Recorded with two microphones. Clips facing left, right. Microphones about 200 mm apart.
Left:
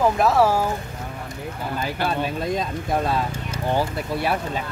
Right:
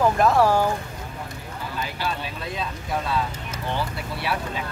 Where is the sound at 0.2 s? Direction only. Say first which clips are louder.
Even; 5° left (ahead or behind).